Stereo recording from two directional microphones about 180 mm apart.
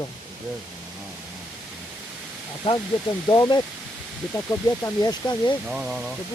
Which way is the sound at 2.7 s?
30° left (ahead or behind).